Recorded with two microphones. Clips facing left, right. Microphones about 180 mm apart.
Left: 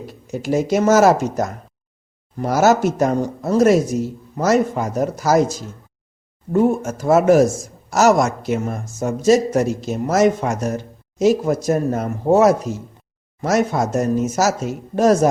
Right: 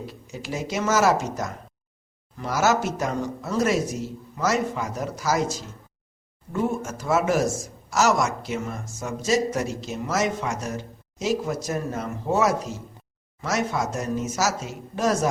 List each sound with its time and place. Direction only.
0.1 s speech: 50° left (ahead or behind)